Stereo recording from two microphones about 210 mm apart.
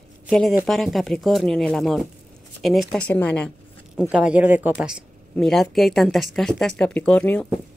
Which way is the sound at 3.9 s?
5° right (ahead or behind).